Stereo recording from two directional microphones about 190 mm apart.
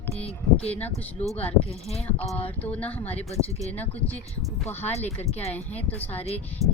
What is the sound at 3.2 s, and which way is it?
Speech, 35° left (ahead or behind).